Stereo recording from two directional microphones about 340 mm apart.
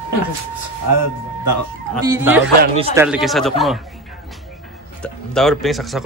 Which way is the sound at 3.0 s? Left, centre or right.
Centre.